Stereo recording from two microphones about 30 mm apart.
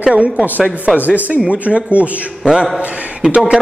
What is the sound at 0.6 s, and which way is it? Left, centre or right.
A man's voice, right.